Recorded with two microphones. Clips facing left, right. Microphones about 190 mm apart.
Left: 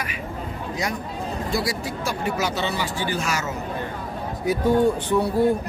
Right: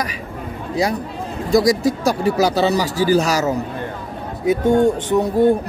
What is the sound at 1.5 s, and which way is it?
Speech, 40° right (ahead or behind).